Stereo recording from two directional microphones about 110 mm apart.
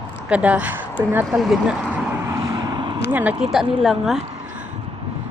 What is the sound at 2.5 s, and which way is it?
Vehicle, 45° right (ahead or behind).